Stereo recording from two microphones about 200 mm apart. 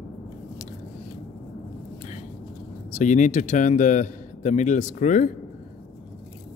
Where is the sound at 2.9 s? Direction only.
40° left (ahead or behind).